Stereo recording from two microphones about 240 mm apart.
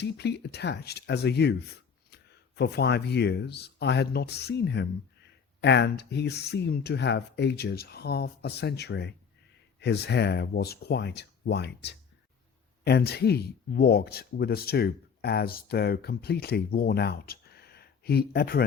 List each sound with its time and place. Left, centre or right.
0.0 s speech: left